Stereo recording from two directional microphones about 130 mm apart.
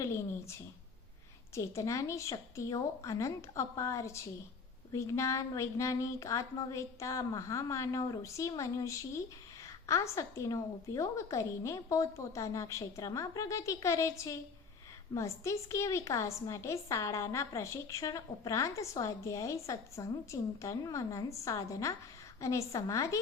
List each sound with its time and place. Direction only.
0.0 s a woman's voice: 20° left (ahead or behind)
1.5 s a woman's voice: 25° left (ahead or behind)